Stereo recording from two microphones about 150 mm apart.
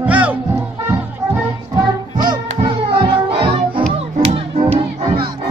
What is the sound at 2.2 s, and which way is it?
Music, 30° right (ahead or behind).